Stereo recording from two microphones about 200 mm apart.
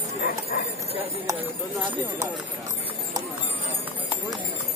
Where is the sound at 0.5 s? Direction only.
45° left (ahead or behind).